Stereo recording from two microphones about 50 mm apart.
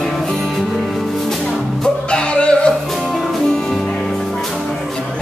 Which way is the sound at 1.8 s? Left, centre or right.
Centre.